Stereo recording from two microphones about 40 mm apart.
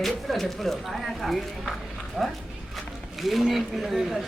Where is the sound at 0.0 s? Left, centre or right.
Centre.